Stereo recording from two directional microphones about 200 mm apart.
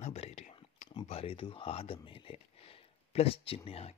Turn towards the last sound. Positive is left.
turn(degrees=30)  # may be behind; listen again after turning